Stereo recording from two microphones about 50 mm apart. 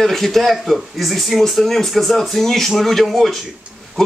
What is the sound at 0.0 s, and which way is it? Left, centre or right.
Speech, centre.